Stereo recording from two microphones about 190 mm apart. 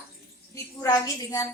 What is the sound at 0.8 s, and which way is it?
Speech, 20° left (ahead or behind).